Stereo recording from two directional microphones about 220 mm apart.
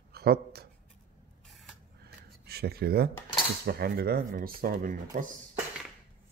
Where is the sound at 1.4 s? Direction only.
Centre (ahead or behind).